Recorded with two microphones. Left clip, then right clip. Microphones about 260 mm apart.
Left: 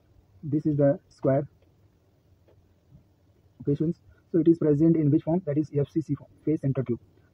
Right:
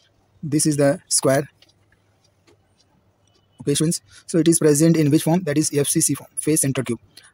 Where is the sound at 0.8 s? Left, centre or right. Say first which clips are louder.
Right 4 dB; right.